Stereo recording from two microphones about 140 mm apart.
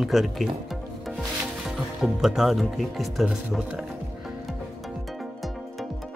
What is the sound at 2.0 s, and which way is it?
Speech, centre (ahead or behind).